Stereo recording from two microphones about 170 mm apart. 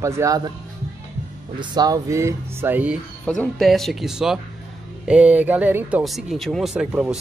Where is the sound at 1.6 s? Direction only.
20° right (ahead or behind).